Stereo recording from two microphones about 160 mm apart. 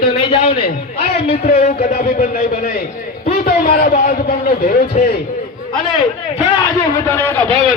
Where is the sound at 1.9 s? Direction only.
70° left (ahead or behind).